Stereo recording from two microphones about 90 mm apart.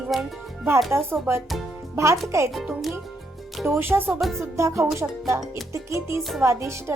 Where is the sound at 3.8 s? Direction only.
20° right (ahead or behind).